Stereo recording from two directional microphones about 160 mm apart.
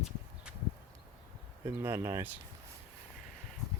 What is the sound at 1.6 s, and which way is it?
Speech, 15° right (ahead or behind).